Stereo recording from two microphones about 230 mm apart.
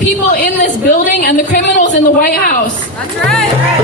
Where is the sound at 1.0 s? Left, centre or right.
Left.